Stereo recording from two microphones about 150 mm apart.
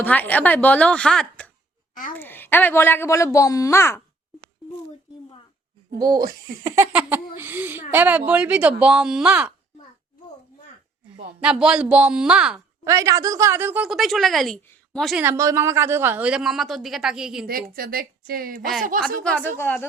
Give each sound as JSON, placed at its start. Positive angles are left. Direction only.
{"t": 0.0, "sound": "a woman's voice", "side_deg": 10}
{"t": 5.9, "sound": "a woman's voice", "side_deg": -25}
{"t": 11.3, "sound": "a woman's voice", "side_deg": -5}
{"t": 12.8, "sound": "a woman's voice", "side_deg": -20}
{"t": 15.2, "sound": "a woman's voice", "side_deg": -20}
{"t": 17.4, "sound": "a woman's voice", "side_deg": -75}
{"t": 19.2, "sound": "a woman's voice", "side_deg": 5}